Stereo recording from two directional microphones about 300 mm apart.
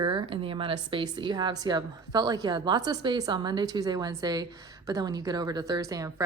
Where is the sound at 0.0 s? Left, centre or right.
Centre.